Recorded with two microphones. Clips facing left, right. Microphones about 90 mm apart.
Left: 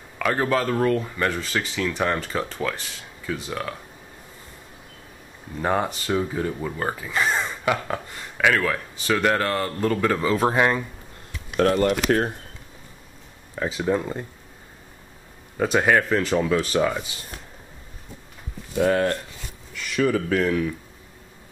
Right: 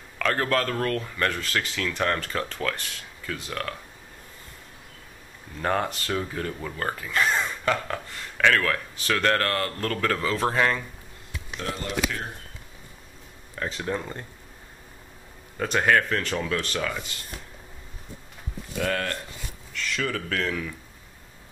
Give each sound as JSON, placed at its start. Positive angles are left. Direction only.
{"t": 0.2, "sound": "speech", "side_deg": 10}
{"t": 5.6, "sound": "speech", "side_deg": 10}
{"t": 11.5, "sound": "speech", "side_deg": 65}
{"t": 13.6, "sound": "speech", "side_deg": 10}
{"t": 15.5, "sound": "speech", "side_deg": 10}
{"t": 18.8, "sound": "speech", "side_deg": 20}